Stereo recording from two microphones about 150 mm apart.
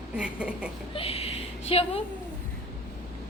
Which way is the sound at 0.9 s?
40° left (ahead or behind).